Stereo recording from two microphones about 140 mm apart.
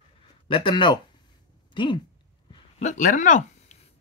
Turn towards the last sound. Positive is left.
turn(degrees=60)  # may be behind; listen again after turning